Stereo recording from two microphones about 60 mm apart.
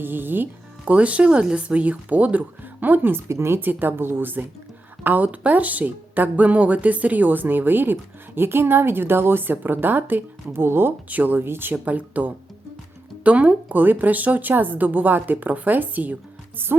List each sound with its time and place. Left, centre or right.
0.0 s a woman's voice: right
0.9 s a woman's voice: right
3.2 s a woman's voice: right
11.7 s a woman's voice: right